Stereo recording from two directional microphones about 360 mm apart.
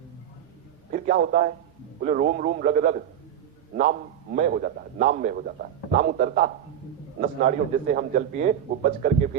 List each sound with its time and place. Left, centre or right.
0.9 s a man's voice: right